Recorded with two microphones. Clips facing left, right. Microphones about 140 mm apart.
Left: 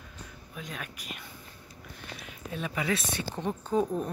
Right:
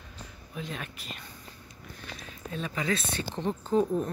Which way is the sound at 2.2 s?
15° left (ahead or behind).